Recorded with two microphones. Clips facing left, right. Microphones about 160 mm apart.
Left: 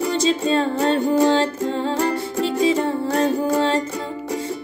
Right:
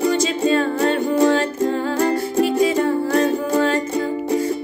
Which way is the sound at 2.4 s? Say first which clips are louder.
Even; 30° left (ahead or behind).